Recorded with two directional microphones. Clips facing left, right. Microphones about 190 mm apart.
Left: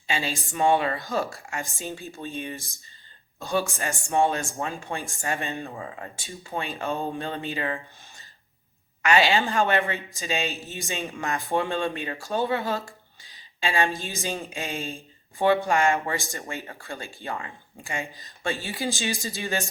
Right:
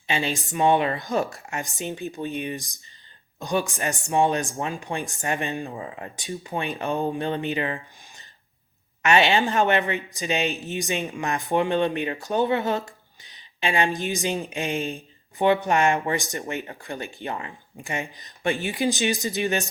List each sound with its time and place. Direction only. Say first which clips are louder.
0.1 s speech: right 3 dB; 20° right (ahead or behind)
5.7 s speech: right 2 dB; 25° right (ahead or behind)
9.0 s speech: right 2 dB; 25° right (ahead or behind)